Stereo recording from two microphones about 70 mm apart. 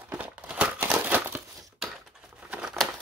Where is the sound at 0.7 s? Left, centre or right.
Right.